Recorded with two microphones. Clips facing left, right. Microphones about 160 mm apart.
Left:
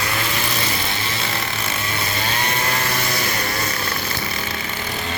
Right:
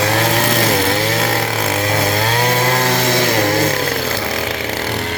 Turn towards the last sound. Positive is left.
turn(degrees=-90)